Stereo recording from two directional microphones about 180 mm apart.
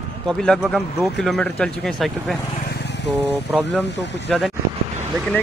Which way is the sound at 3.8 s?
75° left (ahead or behind).